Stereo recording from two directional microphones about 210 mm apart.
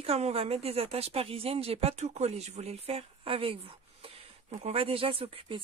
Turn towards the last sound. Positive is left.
turn(degrees=-25)  # may be behind; listen again after turning